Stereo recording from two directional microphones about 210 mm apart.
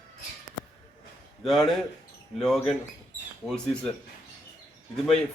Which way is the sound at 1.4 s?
Centre (ahead or behind).